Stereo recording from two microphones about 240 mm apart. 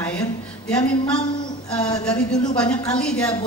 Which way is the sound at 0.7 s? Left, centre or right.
Centre.